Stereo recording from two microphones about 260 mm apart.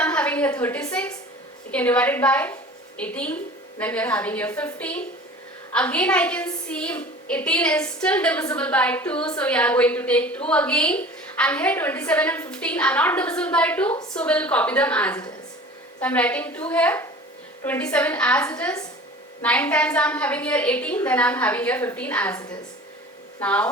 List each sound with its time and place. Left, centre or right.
0.0 s a sound: centre
1.7 s a woman's voice: centre
13.9 s a woman's voice: centre
14.2 s a woman's voice: centre
23.4 s a woman's voice: centre